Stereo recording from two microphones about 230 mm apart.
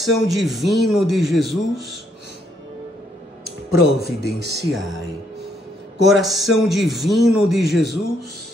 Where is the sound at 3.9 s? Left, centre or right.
Right.